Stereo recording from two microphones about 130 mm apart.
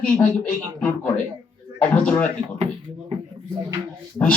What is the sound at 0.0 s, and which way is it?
Speech, 10° left (ahead or behind).